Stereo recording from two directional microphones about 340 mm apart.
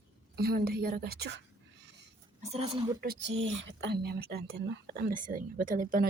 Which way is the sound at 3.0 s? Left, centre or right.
Right.